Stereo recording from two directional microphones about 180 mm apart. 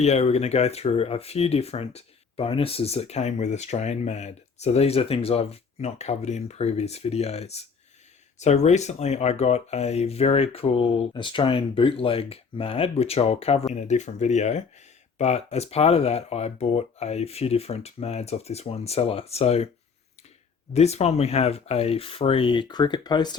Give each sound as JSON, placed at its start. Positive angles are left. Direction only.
{"t": 0.0, "sound": "speech", "side_deg": 35}
{"t": 20.7, "sound": "speech", "side_deg": 35}